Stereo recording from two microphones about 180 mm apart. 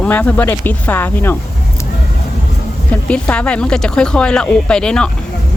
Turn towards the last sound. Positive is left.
turn(degrees=5)  # may be behind; listen again after turning